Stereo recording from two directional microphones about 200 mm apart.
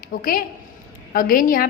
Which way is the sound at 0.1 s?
45° left (ahead or behind).